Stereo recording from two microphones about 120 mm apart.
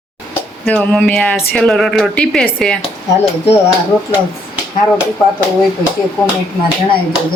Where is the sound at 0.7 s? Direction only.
10° left (ahead or behind).